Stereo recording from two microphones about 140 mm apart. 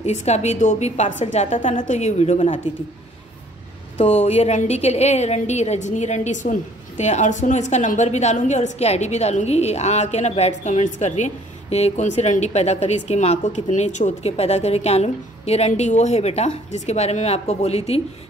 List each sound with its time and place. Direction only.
0.0 s a woman's voice: 55° left (ahead or behind)
4.0 s a woman's voice: 45° left (ahead or behind)